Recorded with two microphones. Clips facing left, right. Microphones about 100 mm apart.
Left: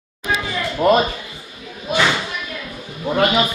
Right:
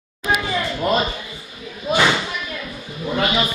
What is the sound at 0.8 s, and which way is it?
Speech, 55° left (ahead or behind).